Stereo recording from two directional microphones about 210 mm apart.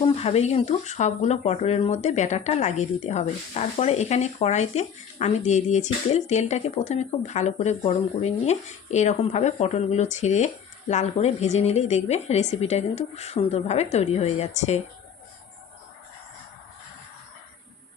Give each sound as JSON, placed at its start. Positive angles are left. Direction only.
{"t": 0.0, "sound": "speech", "side_deg": 30}